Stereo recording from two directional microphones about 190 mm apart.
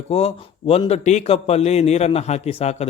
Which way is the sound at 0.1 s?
30° left (ahead or behind).